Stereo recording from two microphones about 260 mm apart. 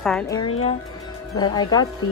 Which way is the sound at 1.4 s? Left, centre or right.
Centre.